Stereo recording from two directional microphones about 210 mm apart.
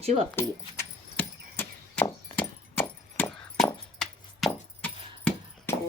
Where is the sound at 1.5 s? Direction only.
10° left (ahead or behind).